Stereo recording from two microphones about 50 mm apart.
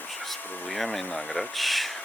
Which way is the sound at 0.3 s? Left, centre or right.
Centre.